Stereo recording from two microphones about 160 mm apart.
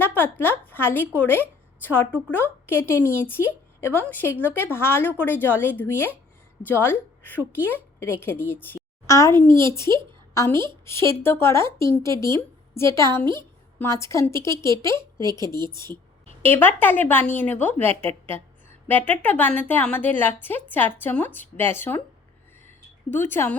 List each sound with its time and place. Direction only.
0.0 s a woman's voice: 15° left (ahead or behind)
15.4 s a woman's voice: 30° right (ahead or behind)
16.4 s speech: 15° left (ahead or behind)
23.1 s speech: 15° left (ahead or behind)